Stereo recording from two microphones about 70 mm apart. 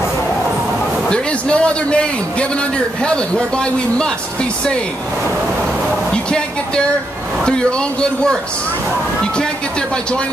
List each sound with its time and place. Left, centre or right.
1.1 s a man's voice: centre
6.1 s a man's voice: centre